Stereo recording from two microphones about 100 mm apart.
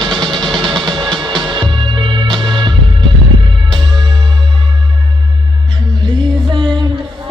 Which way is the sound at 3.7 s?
50° right (ahead or behind).